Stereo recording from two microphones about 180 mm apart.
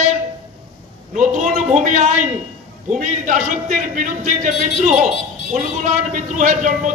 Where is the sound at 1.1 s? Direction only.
45° right (ahead or behind).